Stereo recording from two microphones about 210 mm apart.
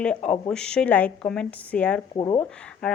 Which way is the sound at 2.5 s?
5° left (ahead or behind).